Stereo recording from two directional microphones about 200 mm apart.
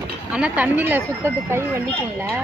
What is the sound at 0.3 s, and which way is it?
Speech, 5° right (ahead or behind).